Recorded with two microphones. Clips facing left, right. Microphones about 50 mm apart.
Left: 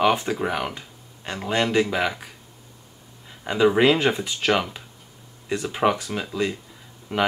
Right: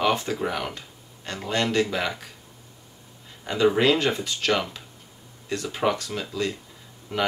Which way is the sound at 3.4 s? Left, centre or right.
Centre.